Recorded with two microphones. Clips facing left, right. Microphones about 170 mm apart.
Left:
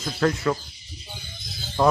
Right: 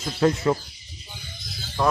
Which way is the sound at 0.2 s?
20° right (ahead or behind).